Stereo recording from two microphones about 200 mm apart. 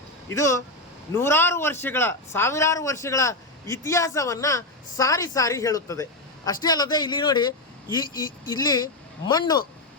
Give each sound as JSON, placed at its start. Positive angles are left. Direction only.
{"t": 0.3, "sound": "a man's voice", "side_deg": 15}